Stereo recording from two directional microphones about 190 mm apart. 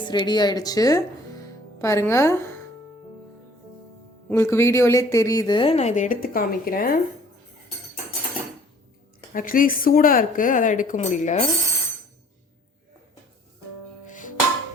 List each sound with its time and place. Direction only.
0.0 s a woman's voice: 25° left (ahead or behind)
4.3 s a woman's voice: 15° left (ahead or behind); by 7.0 s 50° left (ahead or behind)
9.3 s speech: 45° left (ahead or behind)
14.1 s music: 45° left (ahead or behind)